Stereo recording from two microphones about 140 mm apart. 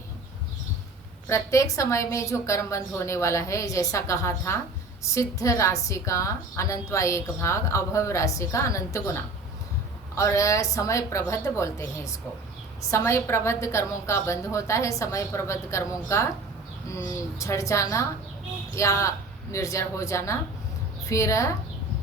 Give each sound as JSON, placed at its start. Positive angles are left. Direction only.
{"t": 1.3, "sound": "a woman's voice", "side_deg": 20}
{"t": 17.4, "sound": "a woman's voice", "side_deg": 20}